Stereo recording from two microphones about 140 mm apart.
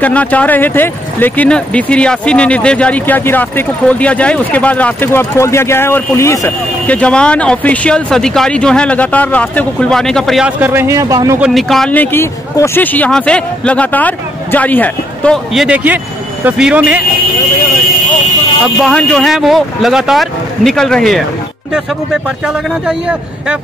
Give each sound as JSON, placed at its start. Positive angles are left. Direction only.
{"t": 0.0, "sound": "speech", "side_deg": 10}
{"t": 6.9, "sound": "speech", "side_deg": 10}
{"t": 10.6, "sound": "a man's voice", "side_deg": -15}
{"t": 11.4, "sound": "speech", "side_deg": 0}
{"t": 11.9, "sound": "speech", "side_deg": 15}
{"t": 18.8, "sound": "speech", "side_deg": 5}
{"t": 22.8, "sound": "speech", "side_deg": -5}